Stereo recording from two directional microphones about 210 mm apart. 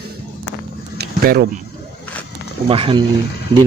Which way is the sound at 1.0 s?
50° right (ahead or behind).